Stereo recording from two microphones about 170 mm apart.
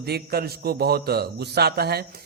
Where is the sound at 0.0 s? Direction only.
65° right (ahead or behind).